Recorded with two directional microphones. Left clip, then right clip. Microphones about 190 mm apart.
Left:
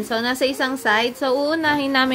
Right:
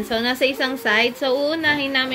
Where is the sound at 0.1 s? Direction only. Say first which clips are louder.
Right 1 dB; 10° left (ahead or behind).